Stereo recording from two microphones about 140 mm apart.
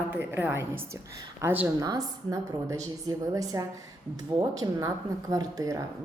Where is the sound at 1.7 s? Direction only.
25° right (ahead or behind).